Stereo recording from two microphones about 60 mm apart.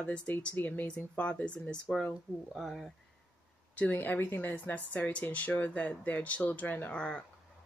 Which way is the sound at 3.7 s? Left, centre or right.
Left.